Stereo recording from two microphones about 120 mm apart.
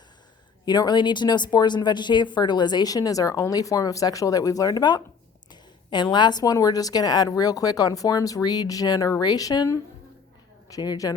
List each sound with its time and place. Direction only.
0.6 s a woman's voice: 35° left (ahead or behind)